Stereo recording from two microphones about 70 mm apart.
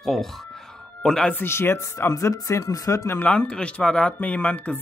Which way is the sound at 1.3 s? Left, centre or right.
Left.